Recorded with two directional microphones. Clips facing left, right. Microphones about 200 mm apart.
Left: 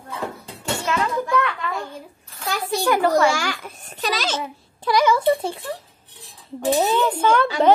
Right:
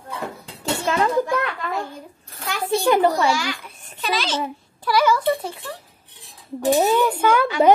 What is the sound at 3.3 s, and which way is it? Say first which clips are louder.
A child's voice: even; 45° left (ahead or behind).